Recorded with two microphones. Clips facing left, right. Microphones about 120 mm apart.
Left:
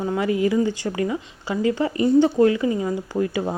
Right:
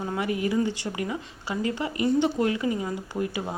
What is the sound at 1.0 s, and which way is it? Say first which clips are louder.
Speech: left 6 dB; 25° left (ahead or behind).